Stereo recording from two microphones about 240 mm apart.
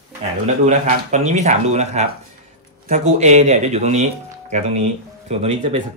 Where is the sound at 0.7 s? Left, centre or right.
Right.